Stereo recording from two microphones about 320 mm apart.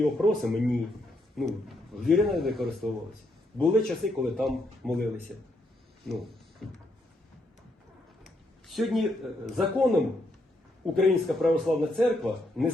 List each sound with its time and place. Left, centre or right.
0.0 s a man's voice: centre
6.1 s a sound: centre
8.2 s a man's voice: centre